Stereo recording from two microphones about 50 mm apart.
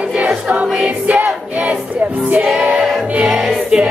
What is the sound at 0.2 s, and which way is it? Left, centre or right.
Music, right.